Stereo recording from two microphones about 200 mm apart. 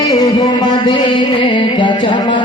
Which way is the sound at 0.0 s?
20° left (ahead or behind).